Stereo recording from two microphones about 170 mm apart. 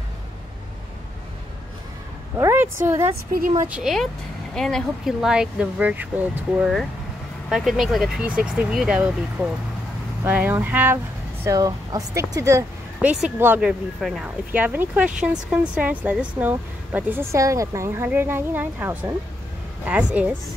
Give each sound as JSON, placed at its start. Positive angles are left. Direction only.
{"t": 2.3, "sound": "speech", "side_deg": -15}
{"t": 3.3, "sound": "a woman's voice", "side_deg": -55}
{"t": 3.6, "sound": "speech", "side_deg": -5}
{"t": 11.4, "sound": "speech", "side_deg": -20}